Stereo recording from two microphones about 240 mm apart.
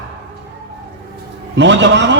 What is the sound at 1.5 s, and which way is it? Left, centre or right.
Speech, right.